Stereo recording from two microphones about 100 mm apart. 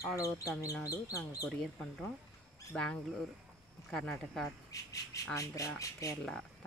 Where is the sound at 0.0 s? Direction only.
30° left (ahead or behind).